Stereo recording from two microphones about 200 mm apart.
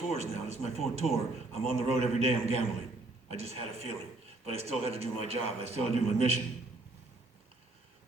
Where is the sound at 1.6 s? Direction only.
30° right (ahead or behind).